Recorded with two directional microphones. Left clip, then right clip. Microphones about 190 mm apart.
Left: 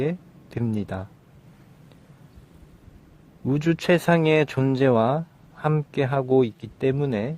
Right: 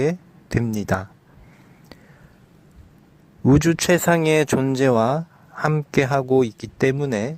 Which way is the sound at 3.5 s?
25° right (ahead or behind).